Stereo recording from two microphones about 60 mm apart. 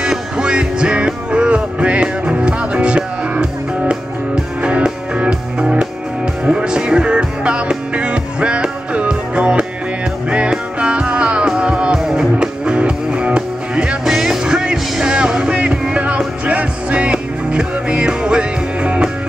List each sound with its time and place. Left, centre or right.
0.0 s music: centre
14.0 s music: centre